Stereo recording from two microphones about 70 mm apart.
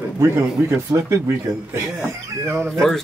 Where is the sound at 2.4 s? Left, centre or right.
Right.